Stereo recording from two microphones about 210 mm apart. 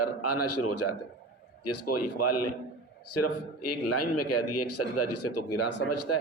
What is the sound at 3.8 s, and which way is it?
A man's voice, 90° left.